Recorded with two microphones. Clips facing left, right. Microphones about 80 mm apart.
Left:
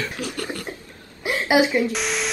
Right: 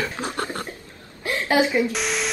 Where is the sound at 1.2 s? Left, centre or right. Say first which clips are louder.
Left 2 dB; centre.